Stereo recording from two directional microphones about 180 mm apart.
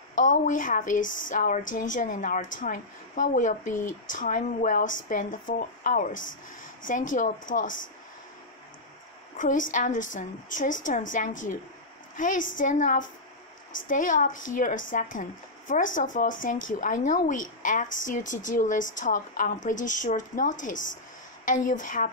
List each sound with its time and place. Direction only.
0.2 s speech: 45° left (ahead or behind)
1.0 s speech: 90° left
1.3 s speech: 45° left (ahead or behind)
9.4 s speech: 45° left (ahead or behind)
20.7 s speech: 90° left
21.5 s speech: 45° left (ahead or behind)